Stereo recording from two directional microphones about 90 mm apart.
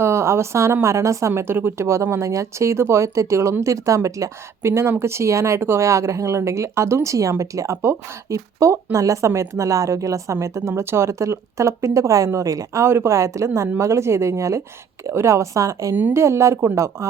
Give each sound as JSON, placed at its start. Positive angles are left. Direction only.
{"t": 0.0, "sound": "a woman's voice", "side_deg": -30}